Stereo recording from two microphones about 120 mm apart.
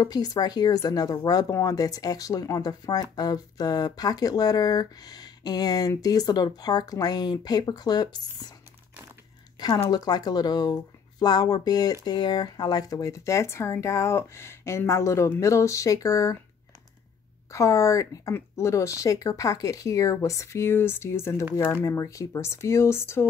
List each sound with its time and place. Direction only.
0.0 s speech: 30° left (ahead or behind)
9.8 s speech: 35° left (ahead or behind)
17.5 s speech: 25° left (ahead or behind)